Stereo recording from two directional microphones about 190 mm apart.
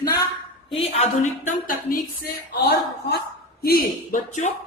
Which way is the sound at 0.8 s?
35° left (ahead or behind).